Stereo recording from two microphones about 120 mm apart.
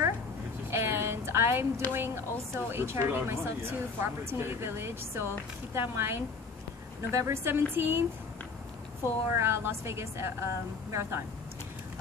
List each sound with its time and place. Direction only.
0.7 s a sound: 20° right (ahead or behind)
1.9 s speech: 20° right (ahead or behind)
9.3 s speech: 20° right (ahead or behind)